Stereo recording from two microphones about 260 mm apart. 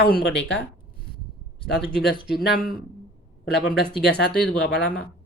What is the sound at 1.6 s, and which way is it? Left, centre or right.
Speech, left.